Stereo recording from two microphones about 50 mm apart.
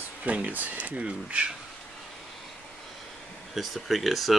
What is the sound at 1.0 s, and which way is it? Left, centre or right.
Speech, right.